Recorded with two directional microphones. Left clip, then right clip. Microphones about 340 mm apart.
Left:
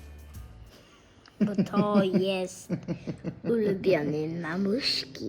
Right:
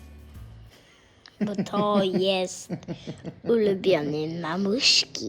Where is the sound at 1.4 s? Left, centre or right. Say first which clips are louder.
Right 2 dB; centre.